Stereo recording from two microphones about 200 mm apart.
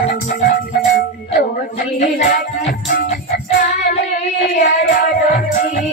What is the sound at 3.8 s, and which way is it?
Child singing, 35° left (ahead or behind).